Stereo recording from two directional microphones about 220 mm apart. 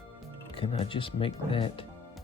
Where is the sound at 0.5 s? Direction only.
25° left (ahead or behind).